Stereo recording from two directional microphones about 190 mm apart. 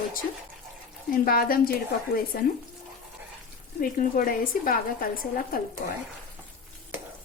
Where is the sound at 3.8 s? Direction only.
50° left (ahead or behind).